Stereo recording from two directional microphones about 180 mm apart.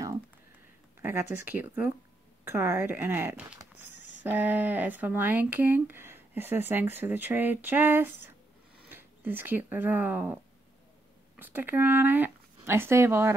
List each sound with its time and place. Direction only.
1.0 s speech: 10° right (ahead or behind)
3.9 s a sound: 80° left
4.2 s speech: 10° right (ahead or behind)
11.3 s speech: 10° right (ahead or behind)